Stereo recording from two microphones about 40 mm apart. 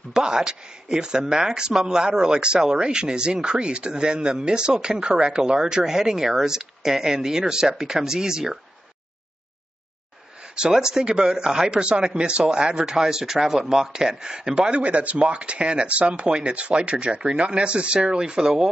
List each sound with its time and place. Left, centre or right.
0.1 s speech: centre
10.5 s speech: centre
14.8 s speech: right; by 18.7 s centre